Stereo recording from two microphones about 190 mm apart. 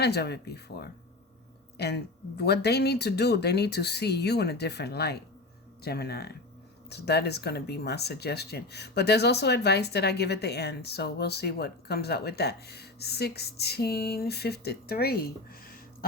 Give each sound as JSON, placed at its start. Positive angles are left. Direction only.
{"t": 0.0, "sound": "speech", "side_deg": 60}